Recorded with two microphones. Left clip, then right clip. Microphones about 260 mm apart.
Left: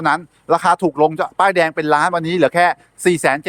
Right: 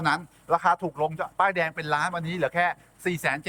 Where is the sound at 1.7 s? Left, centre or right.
Centre.